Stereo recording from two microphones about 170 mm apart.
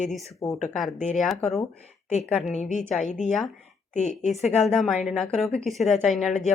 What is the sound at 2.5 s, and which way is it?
Speech, 45° left (ahead or behind).